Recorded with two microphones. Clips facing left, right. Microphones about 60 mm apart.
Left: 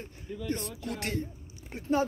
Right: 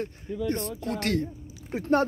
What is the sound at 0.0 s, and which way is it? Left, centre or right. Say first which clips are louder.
Speech: right 8 dB; right.